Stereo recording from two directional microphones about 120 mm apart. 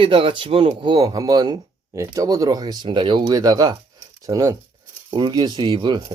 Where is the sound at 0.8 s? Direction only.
40° right (ahead or behind).